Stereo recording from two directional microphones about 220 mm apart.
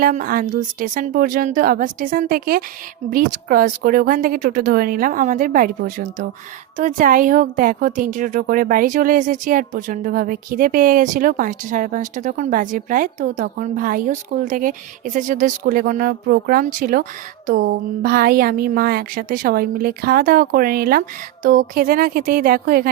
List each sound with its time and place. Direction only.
0.0 s a woman's voice: 40° right (ahead or behind)